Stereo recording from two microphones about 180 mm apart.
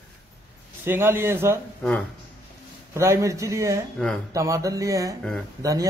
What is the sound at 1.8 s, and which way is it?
Speech, 10° left (ahead or behind).